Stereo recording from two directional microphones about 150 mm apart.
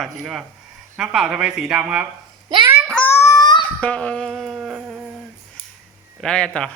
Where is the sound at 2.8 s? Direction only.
5° left (ahead or behind).